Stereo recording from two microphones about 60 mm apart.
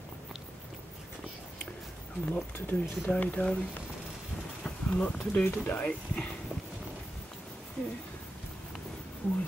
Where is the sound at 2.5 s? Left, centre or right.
Left.